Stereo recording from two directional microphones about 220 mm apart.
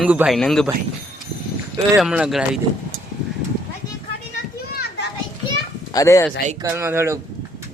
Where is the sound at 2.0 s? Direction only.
5° right (ahead or behind).